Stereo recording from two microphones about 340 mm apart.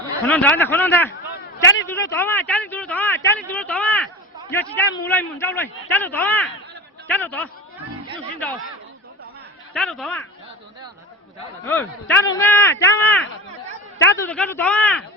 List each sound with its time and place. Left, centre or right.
0.3 s speech: centre
1.6 s speech: left
1.9 s speech: centre
9.7 s speech: centre
11.6 s speech: centre